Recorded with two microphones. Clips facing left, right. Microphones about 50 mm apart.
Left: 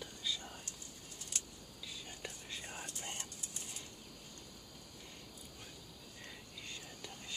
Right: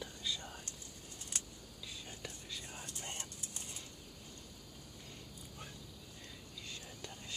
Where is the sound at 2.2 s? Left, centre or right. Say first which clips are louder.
Left 1 dB; left.